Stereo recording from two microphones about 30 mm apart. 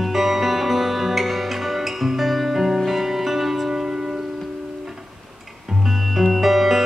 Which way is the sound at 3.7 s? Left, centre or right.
Centre.